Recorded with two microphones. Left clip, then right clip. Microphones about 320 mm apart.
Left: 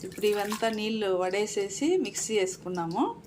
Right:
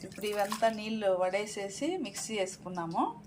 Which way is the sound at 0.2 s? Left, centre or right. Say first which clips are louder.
Left 3 dB; centre.